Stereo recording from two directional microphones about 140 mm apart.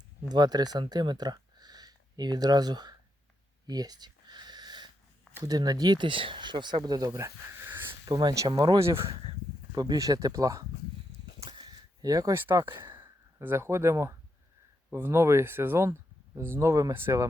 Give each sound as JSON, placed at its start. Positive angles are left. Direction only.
{"t": 0.3, "sound": "speech", "side_deg": -30}
{"t": 3.7, "sound": "a sound", "side_deg": -30}
{"t": 5.3, "sound": "speech", "side_deg": -25}
{"t": 8.1, "sound": "speech", "side_deg": -25}
{"t": 9.0, "sound": "speech", "side_deg": -45}
{"t": 9.7, "sound": "speech", "side_deg": -30}
{"t": 11.3, "sound": "a sound", "side_deg": -40}
{"t": 13.0, "sound": "speech", "side_deg": -15}